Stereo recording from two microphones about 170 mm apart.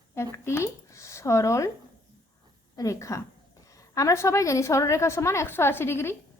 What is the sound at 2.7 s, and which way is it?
A woman's voice, 20° left (ahead or behind).